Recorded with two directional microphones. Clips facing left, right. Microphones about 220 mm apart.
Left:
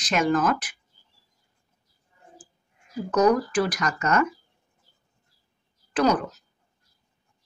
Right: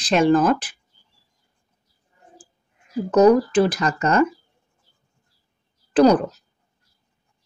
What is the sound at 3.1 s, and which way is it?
Speech, 25° right (ahead or behind).